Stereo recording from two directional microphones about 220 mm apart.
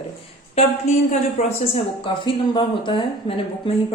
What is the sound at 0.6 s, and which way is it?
A woman's voice, 30° left (ahead or behind).